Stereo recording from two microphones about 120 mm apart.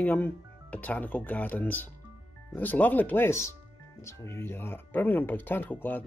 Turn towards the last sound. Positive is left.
turn(degrees=15)  # may be behind; listen again after turning